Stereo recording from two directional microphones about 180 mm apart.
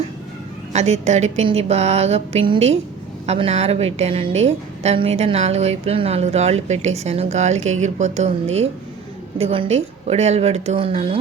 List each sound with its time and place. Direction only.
0.7 s a woman's voice: 40° right (ahead or behind)